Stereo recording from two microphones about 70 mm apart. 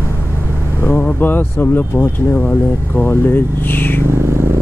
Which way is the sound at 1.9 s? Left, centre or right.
Left.